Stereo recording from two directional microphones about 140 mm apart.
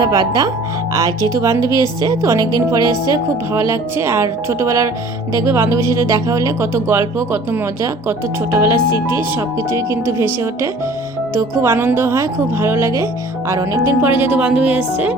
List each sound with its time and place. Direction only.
0.0 s a woman's voice: 25° right (ahead or behind); by 14.8 s 10° right (ahead or behind)